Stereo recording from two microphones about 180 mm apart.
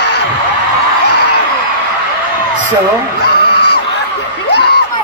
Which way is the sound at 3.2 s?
65° left (ahead or behind).